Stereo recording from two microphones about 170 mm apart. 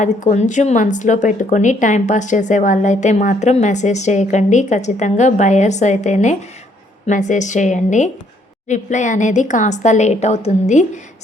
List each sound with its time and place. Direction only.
0.0 s a woman's voice: 45° left (ahead or behind)